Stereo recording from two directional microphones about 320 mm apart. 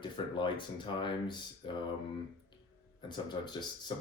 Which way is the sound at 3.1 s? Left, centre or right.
Centre.